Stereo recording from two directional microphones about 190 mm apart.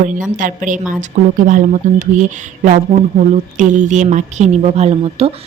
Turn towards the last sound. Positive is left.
turn(degrees=-30)  # may be behind; listen again after turning